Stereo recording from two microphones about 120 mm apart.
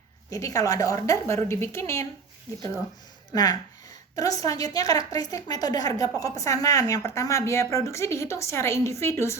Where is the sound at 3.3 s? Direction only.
30° left (ahead or behind).